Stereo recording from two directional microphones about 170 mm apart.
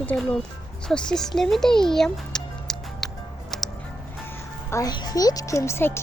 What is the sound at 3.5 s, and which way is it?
Music, centre (ahead or behind).